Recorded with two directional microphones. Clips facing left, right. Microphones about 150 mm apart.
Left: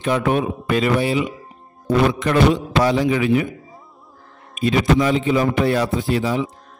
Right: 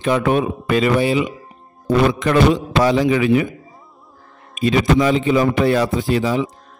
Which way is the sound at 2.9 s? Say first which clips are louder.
Right 4 dB; 90° right.